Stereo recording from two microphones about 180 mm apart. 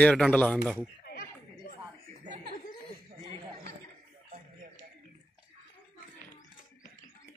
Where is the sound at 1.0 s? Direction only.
55° left (ahead or behind).